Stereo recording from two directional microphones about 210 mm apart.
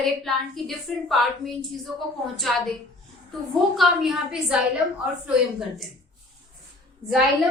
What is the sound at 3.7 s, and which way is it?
Speech, centre (ahead or behind).